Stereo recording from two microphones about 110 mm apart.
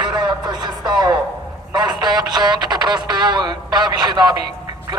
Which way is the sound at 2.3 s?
40° right (ahead or behind).